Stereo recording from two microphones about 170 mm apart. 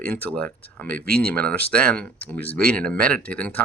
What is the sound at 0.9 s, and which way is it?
Speech, 65° right (ahead or behind).